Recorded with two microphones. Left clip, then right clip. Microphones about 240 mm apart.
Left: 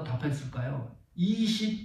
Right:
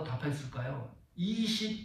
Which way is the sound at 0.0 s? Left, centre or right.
Right.